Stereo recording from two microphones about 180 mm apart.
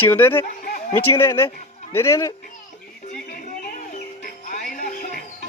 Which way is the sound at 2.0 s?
15° left (ahead or behind).